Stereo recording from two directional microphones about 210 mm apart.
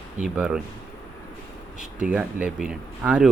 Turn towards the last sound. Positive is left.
turn(degrees=-5)  # may be behind; listen again after turning